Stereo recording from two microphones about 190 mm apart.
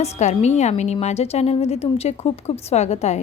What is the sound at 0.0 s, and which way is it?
A woman's voice, 35° left (ahead or behind).